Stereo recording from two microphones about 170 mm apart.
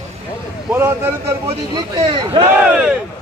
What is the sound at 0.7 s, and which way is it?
Speech, 10° right (ahead or behind).